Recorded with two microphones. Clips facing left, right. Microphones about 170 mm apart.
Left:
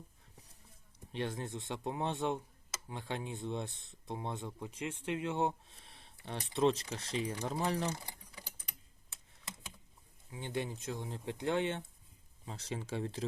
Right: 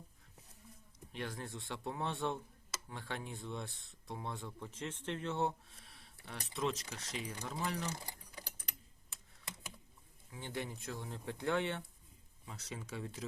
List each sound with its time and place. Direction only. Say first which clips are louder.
0.9 s speech: left 5 dB; 25° left (ahead or behind)
10.3 s speech: left 4 dB; 20° left (ahead or behind)